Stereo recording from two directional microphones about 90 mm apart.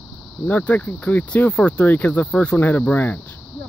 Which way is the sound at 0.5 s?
20° left (ahead or behind).